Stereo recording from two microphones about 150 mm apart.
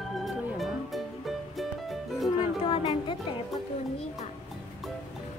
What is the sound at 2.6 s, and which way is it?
Music, 35° left (ahead or behind).